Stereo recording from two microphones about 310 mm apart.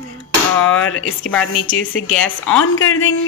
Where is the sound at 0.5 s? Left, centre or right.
Left.